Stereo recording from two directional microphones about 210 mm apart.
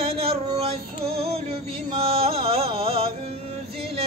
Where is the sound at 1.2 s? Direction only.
30° right (ahead or behind).